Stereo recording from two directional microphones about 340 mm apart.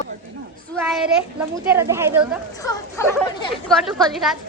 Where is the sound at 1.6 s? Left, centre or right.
Centre.